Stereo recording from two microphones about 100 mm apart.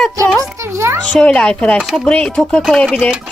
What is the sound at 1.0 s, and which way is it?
Speech, 10° left (ahead or behind).